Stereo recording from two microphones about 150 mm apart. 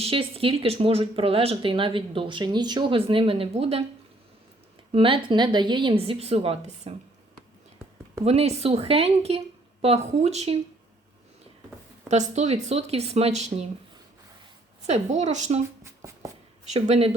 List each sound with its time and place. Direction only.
0.0 s speech: 40° right (ahead or behind)
4.9 s speech: 35° right (ahead or behind)
8.2 s a woman's voice: 45° right (ahead or behind)
12.0 s a woman's voice: 50° right (ahead or behind)
14.8 s a woman's voice: 45° right (ahead or behind)
15.8 s writing: 20° right (ahead or behind)
16.6 s a woman's voice: 50° right (ahead or behind)